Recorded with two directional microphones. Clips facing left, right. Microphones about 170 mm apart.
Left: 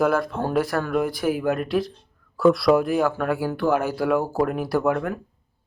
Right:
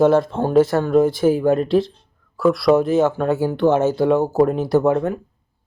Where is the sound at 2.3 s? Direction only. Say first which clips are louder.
Right 1 dB; centre (ahead or behind).